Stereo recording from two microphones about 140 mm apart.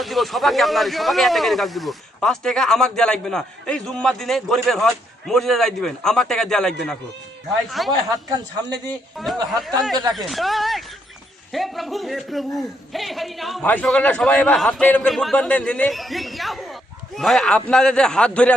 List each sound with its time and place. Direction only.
0.0 s speech: centre (ahead or behind)
7.9 s a woman's voice: 30° right (ahead or behind)
9.1 s speech: centre (ahead or behind)